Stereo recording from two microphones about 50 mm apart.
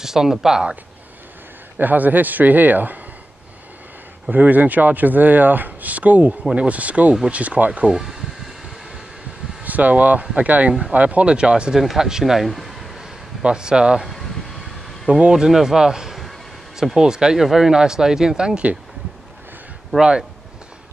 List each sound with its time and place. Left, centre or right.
0.0 s speech: centre
1.8 s speech: right
4.3 s speech: right
7.9 s speech: centre
9.6 s speech: right
11.8 s speech: centre
13.4 s speech: centre
15.0 s speech: right
15.3 s speech: centre
20.0 s speech: centre